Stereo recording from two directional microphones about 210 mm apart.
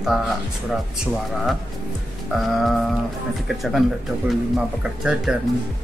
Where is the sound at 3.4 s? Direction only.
Centre (ahead or behind).